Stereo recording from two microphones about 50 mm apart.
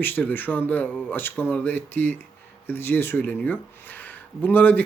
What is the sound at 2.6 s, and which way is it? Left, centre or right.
Speech, left.